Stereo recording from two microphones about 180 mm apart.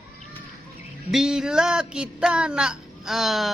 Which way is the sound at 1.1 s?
5° right (ahead or behind).